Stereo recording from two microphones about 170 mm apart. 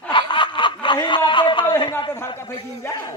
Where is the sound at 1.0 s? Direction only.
30° left (ahead or behind).